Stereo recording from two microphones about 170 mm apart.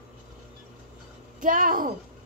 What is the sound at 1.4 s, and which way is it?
Speech, 55° right (ahead or behind).